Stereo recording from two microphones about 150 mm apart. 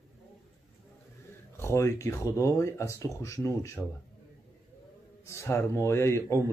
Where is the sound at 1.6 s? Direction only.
20° left (ahead or behind).